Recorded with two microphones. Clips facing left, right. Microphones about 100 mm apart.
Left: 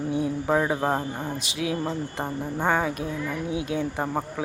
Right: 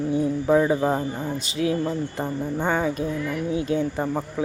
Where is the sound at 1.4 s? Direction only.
5° left (ahead or behind).